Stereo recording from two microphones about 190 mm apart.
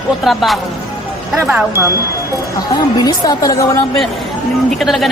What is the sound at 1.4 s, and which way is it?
Speech, 10° right (ahead or behind).